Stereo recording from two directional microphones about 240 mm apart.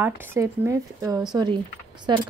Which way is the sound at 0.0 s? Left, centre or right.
Centre.